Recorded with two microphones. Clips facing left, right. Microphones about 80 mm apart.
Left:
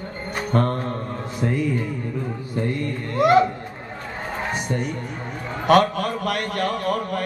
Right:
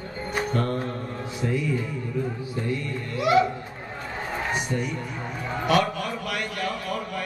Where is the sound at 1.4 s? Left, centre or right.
Left.